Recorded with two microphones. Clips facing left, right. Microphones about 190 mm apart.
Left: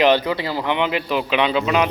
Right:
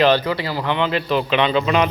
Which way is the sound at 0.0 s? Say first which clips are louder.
Even; 20° left (ahead or behind).